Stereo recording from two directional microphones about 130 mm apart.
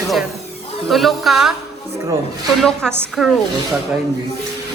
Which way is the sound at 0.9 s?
Centre (ahead or behind).